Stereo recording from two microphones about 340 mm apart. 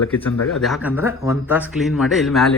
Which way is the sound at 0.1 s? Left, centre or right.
Centre.